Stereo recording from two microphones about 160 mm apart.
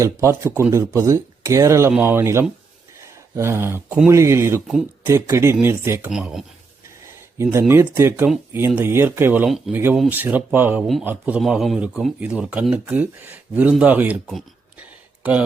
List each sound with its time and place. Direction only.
0.0 s speech: 15° right (ahead or behind)
3.0 s a sound: 15° right (ahead or behind)
4.1 s speech: 15° right (ahead or behind)
6.1 s speech: 5° right (ahead or behind)
7.9 s speech: 15° right (ahead or behind)
9.5 s speech: centre (ahead or behind)
9.7 s speech: 15° right (ahead or behind)
15.2 s speech: 10° right (ahead or behind)